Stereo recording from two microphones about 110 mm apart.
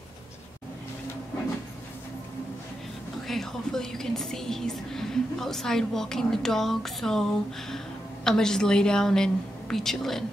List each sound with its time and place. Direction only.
3.3 s a woman's voice: 5° left (ahead or behind)